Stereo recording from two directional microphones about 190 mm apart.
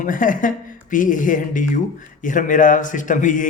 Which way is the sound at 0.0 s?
45° left (ahead or behind).